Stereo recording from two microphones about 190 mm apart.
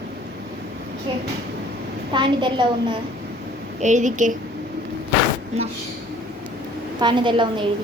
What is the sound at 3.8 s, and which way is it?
Speech, 40° right (ahead or behind).